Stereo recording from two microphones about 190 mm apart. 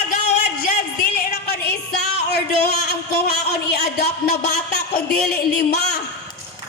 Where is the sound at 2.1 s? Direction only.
60° left (ahead or behind).